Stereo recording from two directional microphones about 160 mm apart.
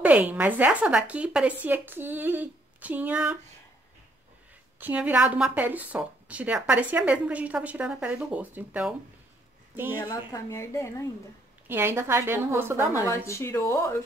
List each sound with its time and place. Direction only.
0.0 s a woman's voice: 10° right (ahead or behind)
4.7 s a woman's voice: 10° right (ahead or behind)
9.9 s a woman's voice: 25° left (ahead or behind)
11.6 s a woman's voice: 15° right (ahead or behind)
13.0 s speech: 20° left (ahead or behind)